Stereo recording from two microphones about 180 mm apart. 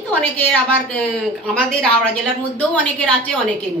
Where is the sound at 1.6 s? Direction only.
5° left (ahead or behind).